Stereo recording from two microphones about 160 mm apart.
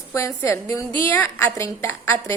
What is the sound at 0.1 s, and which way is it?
A woman's voice, 20° left (ahead or behind).